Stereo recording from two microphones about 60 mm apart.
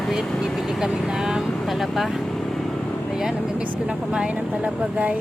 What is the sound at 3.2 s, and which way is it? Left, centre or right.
Speech, centre.